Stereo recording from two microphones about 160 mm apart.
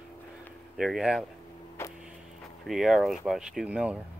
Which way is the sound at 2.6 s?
Centre (ahead or behind).